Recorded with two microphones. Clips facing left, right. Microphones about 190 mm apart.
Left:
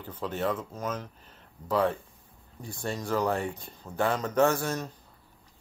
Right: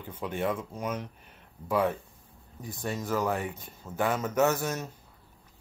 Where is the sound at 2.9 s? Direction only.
5° right (ahead or behind).